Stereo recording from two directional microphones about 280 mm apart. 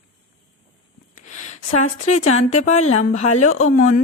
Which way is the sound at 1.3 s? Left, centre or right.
Left.